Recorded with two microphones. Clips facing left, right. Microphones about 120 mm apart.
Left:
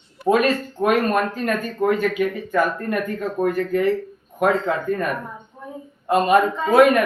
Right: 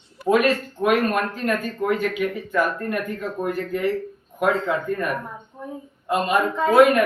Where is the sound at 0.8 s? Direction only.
40° left (ahead or behind).